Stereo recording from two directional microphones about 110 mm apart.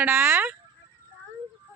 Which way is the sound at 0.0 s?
20° right (ahead or behind).